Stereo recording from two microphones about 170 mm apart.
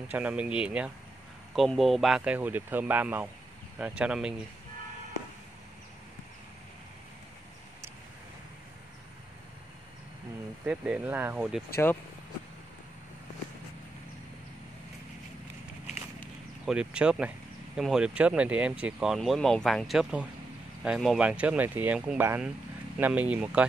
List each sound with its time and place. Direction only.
0.1 s speech: 5° right (ahead or behind)
10.6 s speech: 5° right (ahead or behind)
11.7 s speech: 10° left (ahead or behind)
16.6 s speech: 5° right (ahead or behind)